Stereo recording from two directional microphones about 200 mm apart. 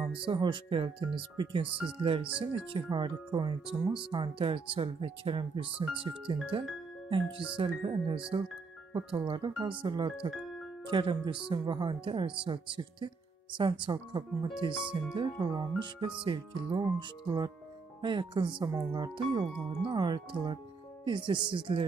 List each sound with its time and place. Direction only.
0.2 s speech: 25° right (ahead or behind)
18.0 s speech: 25° right (ahead or behind)